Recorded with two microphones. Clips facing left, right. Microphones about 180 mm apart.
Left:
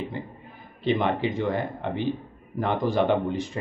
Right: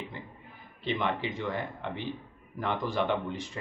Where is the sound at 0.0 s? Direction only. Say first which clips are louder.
Left 8 dB; 45° left (ahead or behind).